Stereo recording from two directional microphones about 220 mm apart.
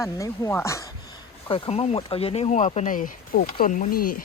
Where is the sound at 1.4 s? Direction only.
25° left (ahead or behind).